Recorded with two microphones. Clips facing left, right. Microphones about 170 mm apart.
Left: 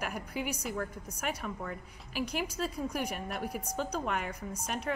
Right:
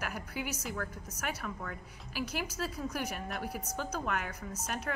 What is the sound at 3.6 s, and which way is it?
Speech, 15° left (ahead or behind).